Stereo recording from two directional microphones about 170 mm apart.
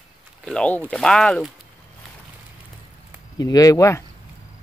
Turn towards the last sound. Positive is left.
turn(degrees=15)  # may be behind; listen again after turning